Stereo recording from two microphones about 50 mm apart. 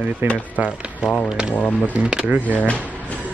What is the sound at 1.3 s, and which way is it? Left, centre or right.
Speech, centre.